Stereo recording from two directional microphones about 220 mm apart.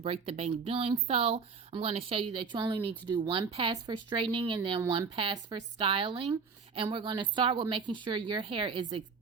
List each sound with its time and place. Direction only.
0.0 s speech: 25° right (ahead or behind)